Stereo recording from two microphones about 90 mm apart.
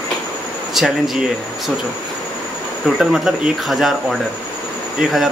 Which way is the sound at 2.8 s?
5° right (ahead or behind).